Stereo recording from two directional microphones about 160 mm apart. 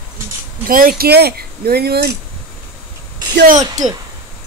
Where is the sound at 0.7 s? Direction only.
60° right (ahead or behind); by 2.1 s 80° right.